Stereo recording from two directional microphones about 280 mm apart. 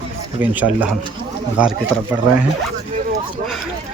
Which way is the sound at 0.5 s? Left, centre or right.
Centre.